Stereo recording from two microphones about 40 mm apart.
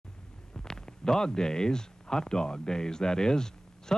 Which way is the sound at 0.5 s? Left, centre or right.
Centre.